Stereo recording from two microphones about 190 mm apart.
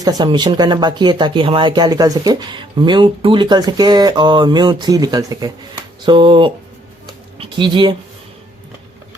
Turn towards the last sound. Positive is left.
turn(degrees=-25)  # may be behind; listen again after turning